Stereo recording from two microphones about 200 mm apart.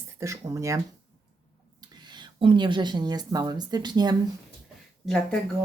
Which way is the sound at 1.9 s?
20° right (ahead or behind).